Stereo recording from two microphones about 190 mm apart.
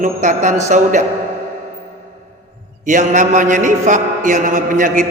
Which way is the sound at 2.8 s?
40° right (ahead or behind).